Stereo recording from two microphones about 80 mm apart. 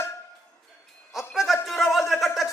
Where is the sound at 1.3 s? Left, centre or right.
Centre.